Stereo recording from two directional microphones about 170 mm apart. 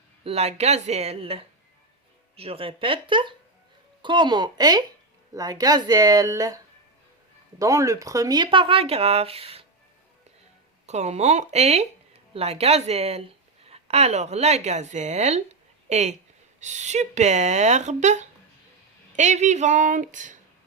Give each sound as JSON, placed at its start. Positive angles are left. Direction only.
{"t": 0.3, "sound": "speech", "side_deg": -35}
{"t": 7.6, "sound": "speech", "side_deg": -20}
{"t": 10.8, "sound": "speech", "side_deg": -40}